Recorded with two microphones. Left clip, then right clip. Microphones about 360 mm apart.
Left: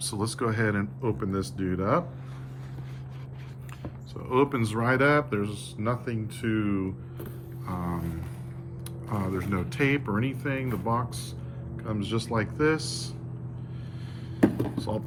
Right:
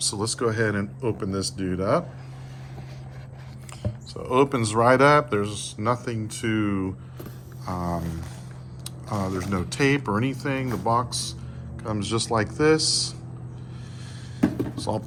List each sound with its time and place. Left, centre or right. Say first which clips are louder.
0.0 s speech: right 5 dB; centre
4.1 s speech: right 4 dB; centre
7.6 s a sound: right 5 dB; centre
9.0 s speech: right 3 dB; centre
14.8 s speech: right 4 dB; centre